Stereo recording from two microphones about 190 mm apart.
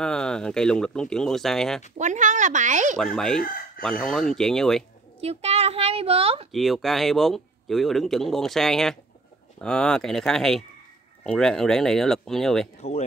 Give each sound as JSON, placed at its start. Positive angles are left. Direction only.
{"t": 0.0, "sound": "a man's voice", "side_deg": 5}
{"t": 2.0, "sound": "speech", "side_deg": -40}
{"t": 3.0, "sound": "a man's voice", "side_deg": 5}
{"t": 5.2, "sound": "a woman's voice", "side_deg": -35}
{"t": 6.5, "sound": "a man's voice", "side_deg": 0}